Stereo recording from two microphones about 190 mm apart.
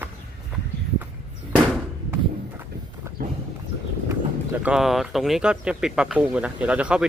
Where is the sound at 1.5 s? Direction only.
5° right (ahead or behind).